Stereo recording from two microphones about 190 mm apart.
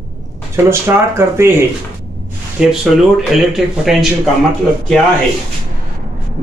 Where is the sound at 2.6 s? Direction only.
Centre (ahead or behind).